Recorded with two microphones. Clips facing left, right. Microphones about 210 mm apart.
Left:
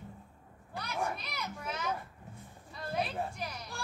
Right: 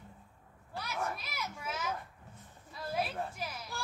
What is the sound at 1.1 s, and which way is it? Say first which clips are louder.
Speech: left 1 dB; 5° right (ahead or behind).